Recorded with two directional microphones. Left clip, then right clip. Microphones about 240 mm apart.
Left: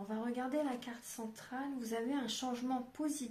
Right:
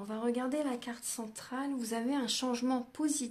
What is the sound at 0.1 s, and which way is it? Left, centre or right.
Speech, right.